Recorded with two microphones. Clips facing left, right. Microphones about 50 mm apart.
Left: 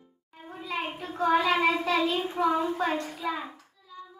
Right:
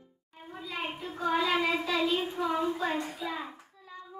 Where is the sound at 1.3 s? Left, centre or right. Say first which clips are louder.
Left 3 dB; left.